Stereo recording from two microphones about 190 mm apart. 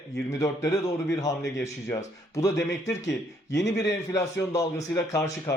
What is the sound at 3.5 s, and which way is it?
Speech, 65° left (ahead or behind).